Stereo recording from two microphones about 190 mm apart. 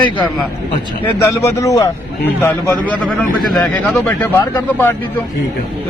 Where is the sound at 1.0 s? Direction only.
15° left (ahead or behind).